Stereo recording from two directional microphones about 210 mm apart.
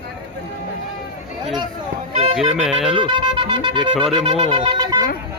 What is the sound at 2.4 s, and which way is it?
Music, centre (ahead or behind).